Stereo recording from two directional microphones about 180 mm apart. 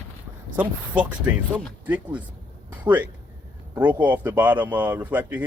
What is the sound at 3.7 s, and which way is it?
Speech, 10° right (ahead or behind).